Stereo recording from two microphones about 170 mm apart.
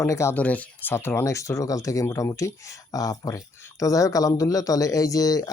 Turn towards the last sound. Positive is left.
turn(degrees=20)  # may be behind; listen again after turning